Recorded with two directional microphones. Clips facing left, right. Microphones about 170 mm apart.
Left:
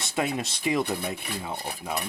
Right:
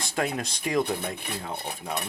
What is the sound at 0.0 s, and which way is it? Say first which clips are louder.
Speech: left 1 dB; centre (ahead or behind).